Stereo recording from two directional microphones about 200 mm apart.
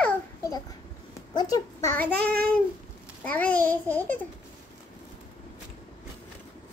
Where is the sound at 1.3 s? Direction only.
20° left (ahead or behind).